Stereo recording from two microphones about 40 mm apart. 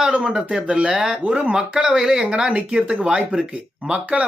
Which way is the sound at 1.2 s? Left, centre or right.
Right.